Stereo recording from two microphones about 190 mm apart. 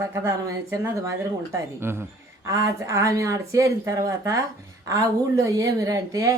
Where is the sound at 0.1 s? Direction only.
15° right (ahead or behind).